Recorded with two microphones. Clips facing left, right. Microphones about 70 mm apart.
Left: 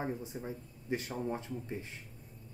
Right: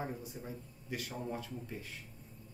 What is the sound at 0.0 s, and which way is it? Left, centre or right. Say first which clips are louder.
Speech: left 4 dB; left.